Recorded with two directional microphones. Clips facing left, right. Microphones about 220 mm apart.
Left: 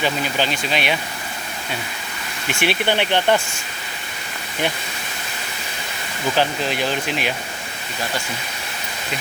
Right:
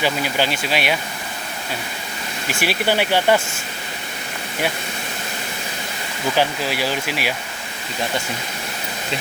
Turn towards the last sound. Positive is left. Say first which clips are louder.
# left 1 dB
turn(degrees=-5)  # may be behind; listen again after turning